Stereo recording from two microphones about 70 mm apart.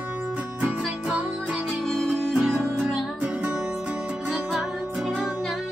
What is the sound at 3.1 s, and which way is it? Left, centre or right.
Music, centre.